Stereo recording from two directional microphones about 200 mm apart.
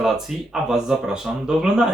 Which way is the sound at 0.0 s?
Centre (ahead or behind).